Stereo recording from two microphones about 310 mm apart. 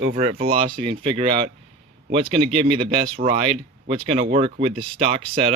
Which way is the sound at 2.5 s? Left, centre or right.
Centre.